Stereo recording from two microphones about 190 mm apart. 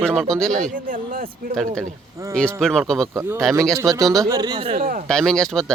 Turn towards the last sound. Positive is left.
turn(degrees=5)  # may be behind; listen again after turning